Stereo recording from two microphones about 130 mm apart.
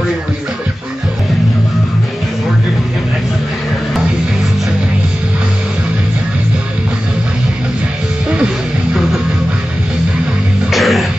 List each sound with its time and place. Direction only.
10.7 s music: centre (ahead or behind)